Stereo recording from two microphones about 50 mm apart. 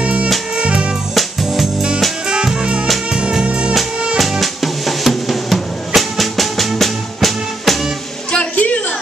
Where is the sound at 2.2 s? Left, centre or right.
Centre.